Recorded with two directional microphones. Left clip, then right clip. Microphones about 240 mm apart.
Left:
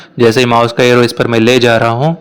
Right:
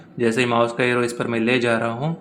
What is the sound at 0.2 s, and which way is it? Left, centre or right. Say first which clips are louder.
Speech: left 10 dB; left.